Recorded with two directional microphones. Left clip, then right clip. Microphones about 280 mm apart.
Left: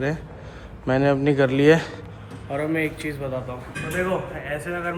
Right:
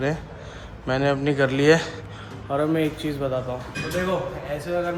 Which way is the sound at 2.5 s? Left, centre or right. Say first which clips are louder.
Right 2 dB; centre.